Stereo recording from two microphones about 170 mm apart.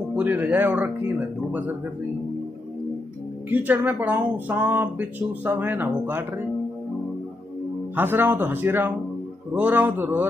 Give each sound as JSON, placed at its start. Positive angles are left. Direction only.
{"t": 0.1, "sound": "speech", "side_deg": -10}
{"t": 3.4, "sound": "speech", "side_deg": -10}
{"t": 7.9, "sound": "speech", "side_deg": -10}